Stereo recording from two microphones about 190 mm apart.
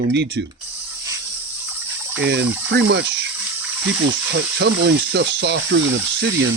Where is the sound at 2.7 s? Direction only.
65° right (ahead or behind).